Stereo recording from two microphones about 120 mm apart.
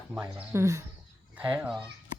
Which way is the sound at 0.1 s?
15° right (ahead or behind).